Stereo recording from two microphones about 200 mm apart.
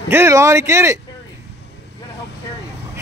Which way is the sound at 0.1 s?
15° right (ahead or behind).